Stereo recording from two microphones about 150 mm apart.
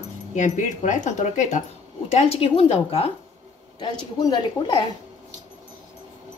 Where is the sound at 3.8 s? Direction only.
30° left (ahead or behind).